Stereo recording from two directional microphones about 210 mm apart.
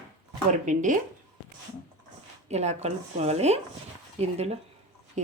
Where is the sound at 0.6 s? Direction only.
35° right (ahead or behind).